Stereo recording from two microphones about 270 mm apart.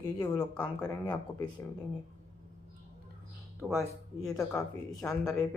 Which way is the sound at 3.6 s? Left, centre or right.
Centre.